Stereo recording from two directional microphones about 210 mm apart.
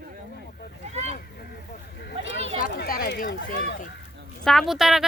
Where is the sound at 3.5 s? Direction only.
45° left (ahead or behind).